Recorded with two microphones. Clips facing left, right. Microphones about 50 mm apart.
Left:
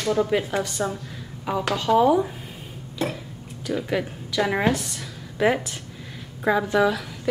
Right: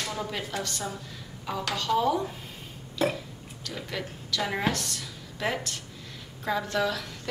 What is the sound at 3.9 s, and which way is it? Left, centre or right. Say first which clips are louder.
A woman's voice: left 7 dB; centre.